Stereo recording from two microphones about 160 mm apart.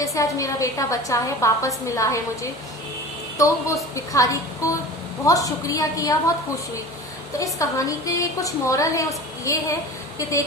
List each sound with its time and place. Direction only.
0.0 s a woman's voice: 20° left (ahead or behind)
7.3 s a woman's voice: 20° left (ahead or behind)